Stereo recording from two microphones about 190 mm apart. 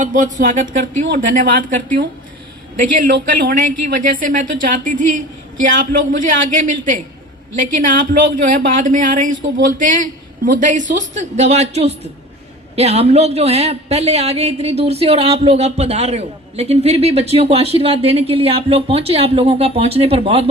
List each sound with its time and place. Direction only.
0.0 s speech: 40° right (ahead or behind)
2.7 s a man's voice: 45° right (ahead or behind); by 20.4 s 30° right (ahead or behind)